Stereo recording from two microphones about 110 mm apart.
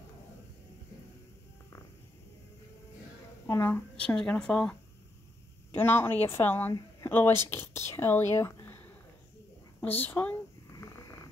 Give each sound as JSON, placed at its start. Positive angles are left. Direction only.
{"t": 3.6, "sound": "speech", "side_deg": 15}
{"t": 5.7, "sound": "a woman's voice", "side_deg": 20}
{"t": 10.8, "sound": "snoring", "side_deg": 30}